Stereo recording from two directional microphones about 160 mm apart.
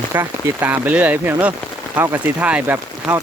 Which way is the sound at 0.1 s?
15° right (ahead or behind).